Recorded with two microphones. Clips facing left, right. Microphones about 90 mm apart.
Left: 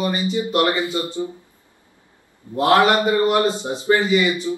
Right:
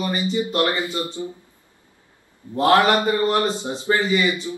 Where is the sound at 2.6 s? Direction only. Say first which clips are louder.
Left 1 dB; 15° left (ahead or behind).